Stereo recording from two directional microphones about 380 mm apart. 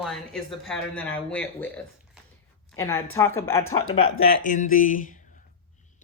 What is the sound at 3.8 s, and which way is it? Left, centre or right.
Speech, left.